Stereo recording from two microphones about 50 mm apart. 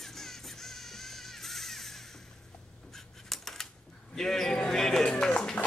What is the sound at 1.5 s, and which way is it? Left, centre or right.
Music, centre.